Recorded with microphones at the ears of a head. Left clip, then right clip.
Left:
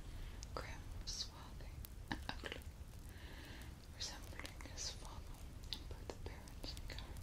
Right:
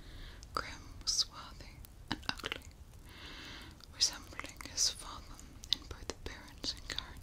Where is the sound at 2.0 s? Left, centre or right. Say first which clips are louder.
Right 8 dB; right.